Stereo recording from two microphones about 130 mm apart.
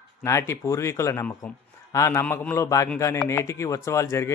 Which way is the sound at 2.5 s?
25° left (ahead or behind).